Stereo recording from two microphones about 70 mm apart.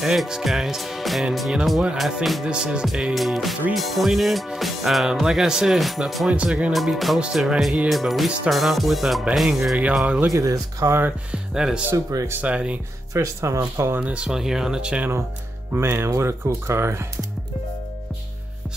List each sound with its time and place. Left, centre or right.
0.0 s speech: centre
6.3 s speech: centre
6.7 s speech: centre
7.9 s speech: centre
10.3 s speech: right
10.9 s speech: right
11.5 s speech: centre
12.1 s speech: right
12.4 s speech: centre
13.1 s speech: right
13.9 s speech: centre
15.7 s speech: right